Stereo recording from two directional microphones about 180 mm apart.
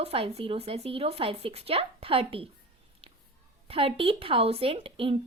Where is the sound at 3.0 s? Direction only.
30° right (ahead or behind).